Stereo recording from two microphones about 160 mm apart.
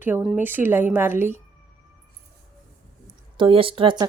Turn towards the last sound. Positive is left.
turn(degrees=-30)  # may be behind; listen again after turning